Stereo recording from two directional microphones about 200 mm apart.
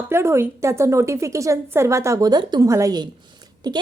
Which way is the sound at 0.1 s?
15° right (ahead or behind).